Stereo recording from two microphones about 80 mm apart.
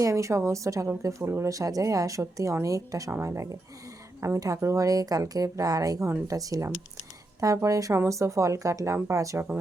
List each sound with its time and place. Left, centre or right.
0.0 s a woman's voice: right